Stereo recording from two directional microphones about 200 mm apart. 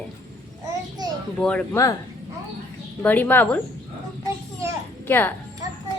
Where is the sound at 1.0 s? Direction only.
20° right (ahead or behind).